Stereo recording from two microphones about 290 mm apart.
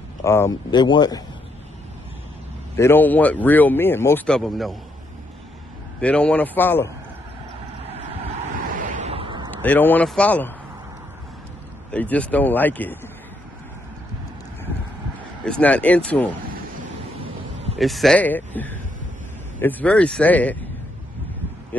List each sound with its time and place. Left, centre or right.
0.2 s speech: centre
2.7 s speech: centre
5.9 s speech: centre
8.5 s a sound: right
9.5 s speech: centre
11.9 s speech: centre
15.4 s speech: centre
17.7 s speech: centre